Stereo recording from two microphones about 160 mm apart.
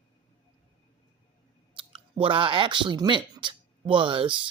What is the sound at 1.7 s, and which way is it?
Speech, 35° right (ahead or behind).